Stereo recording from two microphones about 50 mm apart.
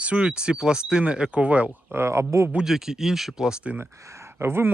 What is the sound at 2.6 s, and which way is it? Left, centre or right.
Speech, centre.